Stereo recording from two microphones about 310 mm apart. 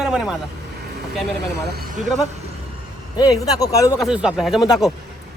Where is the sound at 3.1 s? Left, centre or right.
Centre.